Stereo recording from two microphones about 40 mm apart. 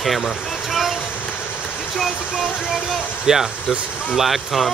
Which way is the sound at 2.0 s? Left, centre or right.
Centre.